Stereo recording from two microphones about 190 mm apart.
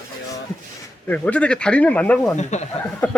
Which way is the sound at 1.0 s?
5° left (ahead or behind).